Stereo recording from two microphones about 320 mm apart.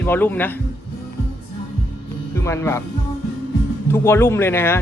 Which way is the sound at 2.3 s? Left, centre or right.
Centre.